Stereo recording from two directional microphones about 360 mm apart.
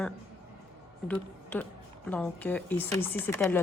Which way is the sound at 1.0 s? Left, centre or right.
Centre.